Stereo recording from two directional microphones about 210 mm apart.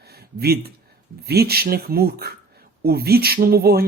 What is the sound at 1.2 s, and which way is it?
Speech, 50° right (ahead or behind).